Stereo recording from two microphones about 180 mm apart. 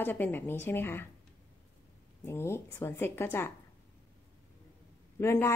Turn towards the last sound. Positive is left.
turn(degrees=15)  # may be behind; listen again after turning